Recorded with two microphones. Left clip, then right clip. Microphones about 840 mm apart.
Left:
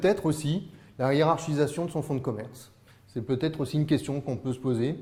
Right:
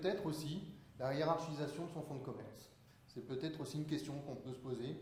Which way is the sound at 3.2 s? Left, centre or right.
Left.